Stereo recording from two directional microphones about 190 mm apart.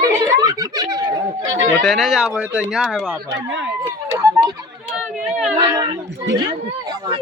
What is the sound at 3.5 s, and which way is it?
Speech, 80° right.